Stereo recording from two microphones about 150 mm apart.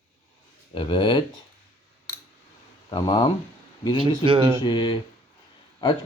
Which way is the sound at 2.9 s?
30° left (ahead or behind).